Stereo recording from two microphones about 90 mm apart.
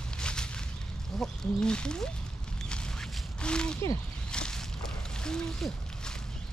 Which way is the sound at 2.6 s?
10° left (ahead or behind).